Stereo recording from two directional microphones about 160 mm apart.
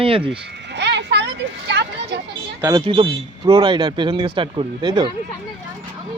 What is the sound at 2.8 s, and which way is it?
A man's voice, 30° right (ahead or behind).